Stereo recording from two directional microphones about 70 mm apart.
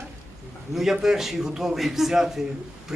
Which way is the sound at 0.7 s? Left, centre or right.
Centre.